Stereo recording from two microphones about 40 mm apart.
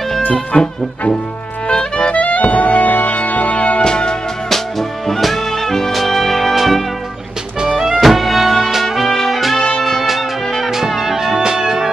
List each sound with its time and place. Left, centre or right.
0.5 s music: left
1.7 s clarinet: left
2.1 s music: left
3.1 s music: left
3.8 s music: left
4.5 s music: centre
8.0 s music: centre